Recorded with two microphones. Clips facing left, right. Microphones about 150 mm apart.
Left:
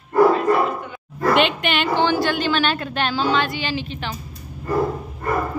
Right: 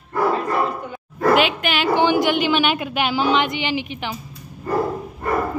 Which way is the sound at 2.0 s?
15° right (ahead or behind).